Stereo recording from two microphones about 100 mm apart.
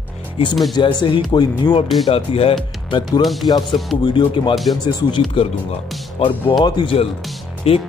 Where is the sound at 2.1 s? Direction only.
75° left (ahead or behind).